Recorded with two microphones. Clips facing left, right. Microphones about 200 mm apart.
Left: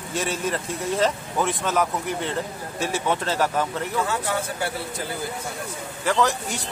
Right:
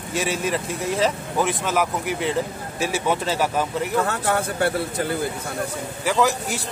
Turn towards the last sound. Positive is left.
turn(degrees=-5)  # may be behind; listen again after turning